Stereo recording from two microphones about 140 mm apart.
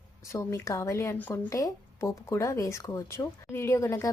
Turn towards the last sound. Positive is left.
turn(degrees=20)  # may be behind; listen again after turning